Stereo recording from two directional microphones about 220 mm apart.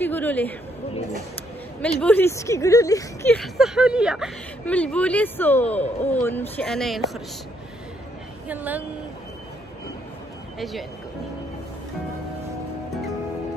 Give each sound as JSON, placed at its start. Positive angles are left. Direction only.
{"t": 0.0, "sound": "speech", "side_deg": 10}
{"t": 1.8, "sound": "speech", "side_deg": 5}
{"t": 3.3, "sound": "speech", "side_deg": 0}
{"t": 8.5, "sound": "a woman's voice", "side_deg": -5}
{"t": 10.6, "sound": "speech", "side_deg": 0}